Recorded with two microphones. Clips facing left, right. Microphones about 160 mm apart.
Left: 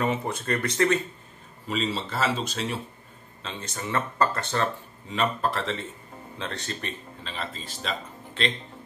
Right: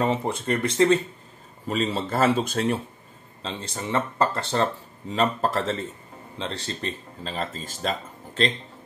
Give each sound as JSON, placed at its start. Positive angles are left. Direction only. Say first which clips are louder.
{"t": 0.0, "sound": "speech", "louder": "right 3 dB", "side_deg": -30}
{"t": 1.7, "sound": "speech", "louder": "right 3 dB", "side_deg": -50}
{"t": 3.4, "sound": "speech", "louder": "right 3 dB", "side_deg": -30}
{"t": 5.1, "sound": "speech", "louder": "right 3 dB", "side_deg": -40}
{"t": 6.3, "sound": "speech", "louder": "right 2 dB", "side_deg": -25}